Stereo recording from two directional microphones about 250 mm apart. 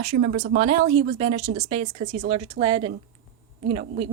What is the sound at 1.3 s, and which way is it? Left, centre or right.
Speech, right.